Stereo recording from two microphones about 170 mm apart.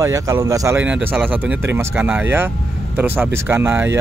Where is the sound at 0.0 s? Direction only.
20° right (ahead or behind).